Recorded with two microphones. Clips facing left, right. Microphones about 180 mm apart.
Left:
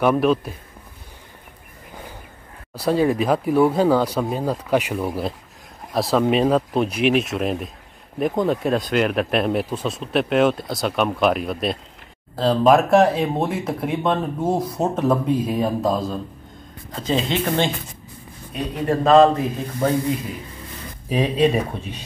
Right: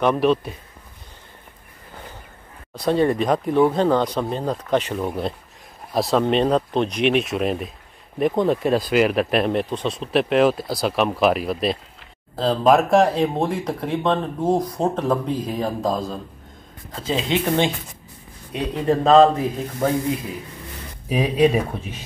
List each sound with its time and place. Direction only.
0.0 s speech: 5° left (ahead or behind)
2.7 s speech: 5° left (ahead or behind)
18.5 s speech: 20° right (ahead or behind)
21.1 s speech: 5° right (ahead or behind)